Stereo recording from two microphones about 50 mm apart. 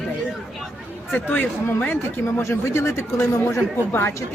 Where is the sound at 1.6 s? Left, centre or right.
Left.